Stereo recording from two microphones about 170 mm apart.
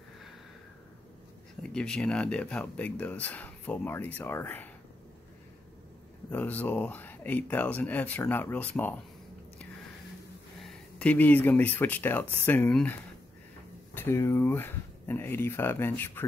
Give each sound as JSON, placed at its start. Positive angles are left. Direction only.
{"t": 1.6, "sound": "speech", "side_deg": 5}
{"t": 6.3, "sound": "speech", "side_deg": 10}
{"t": 10.6, "sound": "speech", "side_deg": 5}
{"t": 13.9, "sound": "speech", "side_deg": 15}